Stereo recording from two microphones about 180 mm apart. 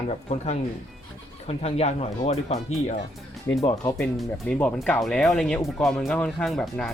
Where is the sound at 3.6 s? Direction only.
20° left (ahead or behind).